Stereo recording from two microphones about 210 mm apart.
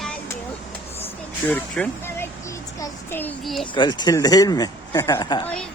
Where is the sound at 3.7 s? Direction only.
20° left (ahead or behind).